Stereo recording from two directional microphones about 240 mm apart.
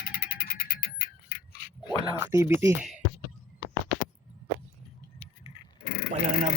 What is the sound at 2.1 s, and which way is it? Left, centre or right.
Speech, centre.